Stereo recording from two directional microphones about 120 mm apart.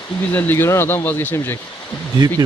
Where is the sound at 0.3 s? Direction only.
15° left (ahead or behind).